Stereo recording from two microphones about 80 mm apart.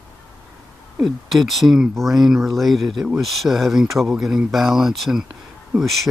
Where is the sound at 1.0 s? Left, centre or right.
Centre.